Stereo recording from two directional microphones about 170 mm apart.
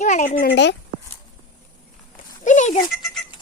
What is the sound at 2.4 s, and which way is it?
Goat, 45° left (ahead or behind).